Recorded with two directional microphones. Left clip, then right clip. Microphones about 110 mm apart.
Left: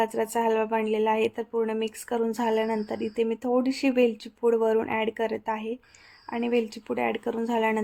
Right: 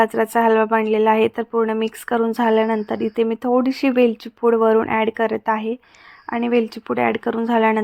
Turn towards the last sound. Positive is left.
turn(degrees=-30)  # may be behind; listen again after turning